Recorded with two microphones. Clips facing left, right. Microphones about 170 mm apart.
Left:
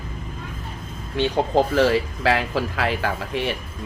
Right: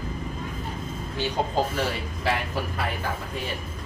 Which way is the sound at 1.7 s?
90° left.